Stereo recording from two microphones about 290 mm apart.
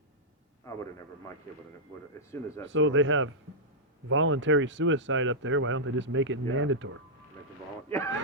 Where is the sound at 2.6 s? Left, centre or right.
Right.